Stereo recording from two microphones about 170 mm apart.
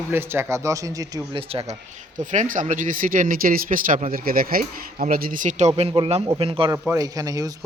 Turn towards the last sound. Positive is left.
turn(degrees=-20)  # may be behind; listen again after turning